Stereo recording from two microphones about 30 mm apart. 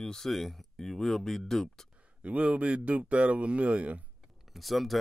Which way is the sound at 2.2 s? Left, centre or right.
Right.